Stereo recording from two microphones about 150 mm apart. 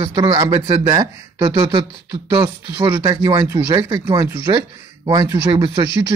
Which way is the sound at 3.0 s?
25° right (ahead or behind).